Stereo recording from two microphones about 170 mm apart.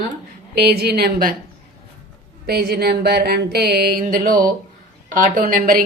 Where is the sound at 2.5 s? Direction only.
65° right (ahead or behind).